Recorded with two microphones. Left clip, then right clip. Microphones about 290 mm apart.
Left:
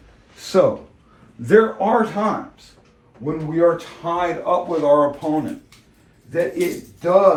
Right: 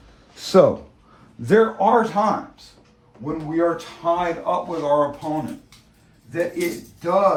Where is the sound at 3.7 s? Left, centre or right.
Centre.